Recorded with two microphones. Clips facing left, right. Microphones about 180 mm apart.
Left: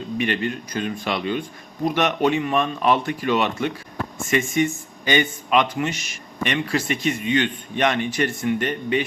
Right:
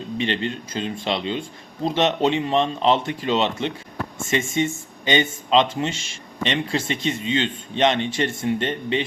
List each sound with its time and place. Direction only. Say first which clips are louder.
0.2 s speech: left 1 dB; 25° right (ahead or behind)